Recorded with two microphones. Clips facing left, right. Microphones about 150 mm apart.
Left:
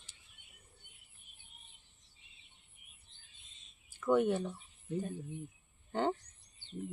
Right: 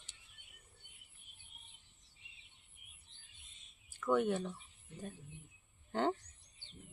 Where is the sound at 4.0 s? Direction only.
5° left (ahead or behind).